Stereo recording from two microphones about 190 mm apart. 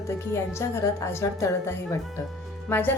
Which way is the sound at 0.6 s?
15° left (ahead or behind).